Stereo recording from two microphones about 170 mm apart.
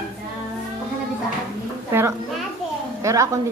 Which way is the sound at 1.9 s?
15° right (ahead or behind).